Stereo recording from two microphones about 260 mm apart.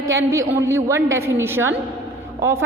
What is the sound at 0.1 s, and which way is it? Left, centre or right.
A woman's voice, centre.